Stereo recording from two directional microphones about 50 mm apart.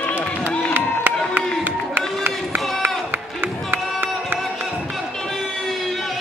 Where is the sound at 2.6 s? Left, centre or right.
Centre.